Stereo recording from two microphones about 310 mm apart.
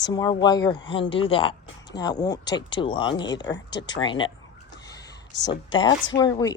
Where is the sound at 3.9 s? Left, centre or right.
Centre.